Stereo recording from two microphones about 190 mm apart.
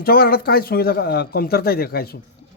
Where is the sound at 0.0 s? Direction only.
55° left (ahead or behind).